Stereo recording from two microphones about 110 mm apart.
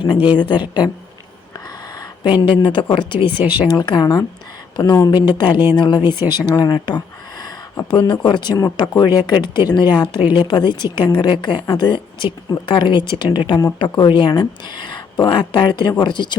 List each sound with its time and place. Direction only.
0.3 s speech: 45° left (ahead or behind)
1.5 s a sound: 35° left (ahead or behind)
2.9 s speech: 50° left (ahead or behind)